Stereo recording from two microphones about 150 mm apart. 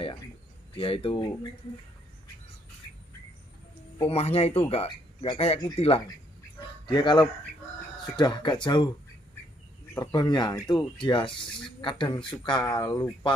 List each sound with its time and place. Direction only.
0.7 s speech: 40° left (ahead or behind)
4.0 s speech: 45° left (ahead or behind)
6.9 s speech: 30° left (ahead or behind)
9.9 s speech: 30° left (ahead or behind)